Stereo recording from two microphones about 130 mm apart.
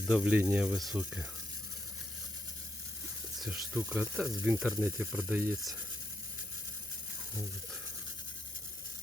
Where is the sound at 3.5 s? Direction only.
10° right (ahead or behind).